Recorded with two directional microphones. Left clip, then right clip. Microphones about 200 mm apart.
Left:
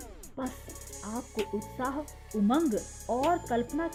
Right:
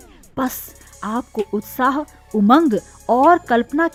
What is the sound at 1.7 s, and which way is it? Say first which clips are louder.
Speech: right 17 dB; 30° right (ahead or behind).